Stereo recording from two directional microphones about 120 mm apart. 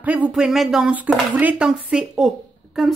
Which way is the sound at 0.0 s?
15° right (ahead or behind).